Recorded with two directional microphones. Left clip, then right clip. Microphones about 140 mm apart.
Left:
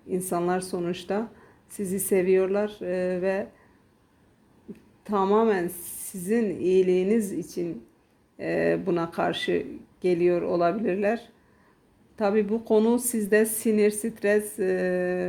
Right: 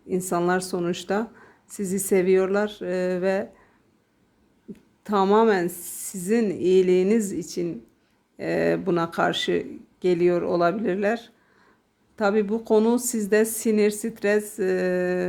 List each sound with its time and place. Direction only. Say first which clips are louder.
0.1 s a woman's voice: right 3 dB; 10° right (ahead or behind)
4.7 s a woman's voice: right 3 dB; 15° right (ahead or behind)